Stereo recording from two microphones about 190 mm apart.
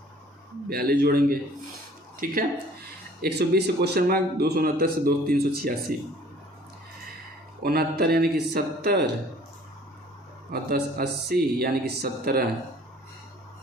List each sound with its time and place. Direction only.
0.7 s speech: 55° right (ahead or behind)
3.2 s a man's voice: 60° right (ahead or behind)
7.6 s a man's voice: 55° right (ahead or behind)
10.5 s speech: 55° right (ahead or behind)